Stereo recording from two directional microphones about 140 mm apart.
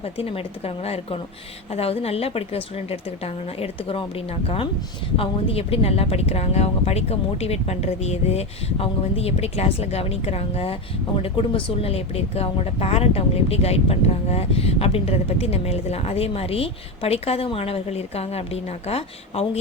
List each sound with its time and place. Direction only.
0.0 s a woman's voice: 45° left (ahead or behind)